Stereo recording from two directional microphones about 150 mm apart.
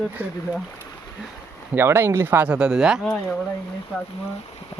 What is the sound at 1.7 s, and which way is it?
Speech, 15° right (ahead or behind).